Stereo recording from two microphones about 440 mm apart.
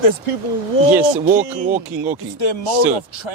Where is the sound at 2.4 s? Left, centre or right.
Left.